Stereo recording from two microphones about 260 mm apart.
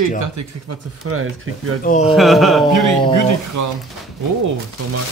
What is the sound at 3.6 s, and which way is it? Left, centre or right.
Speech, right.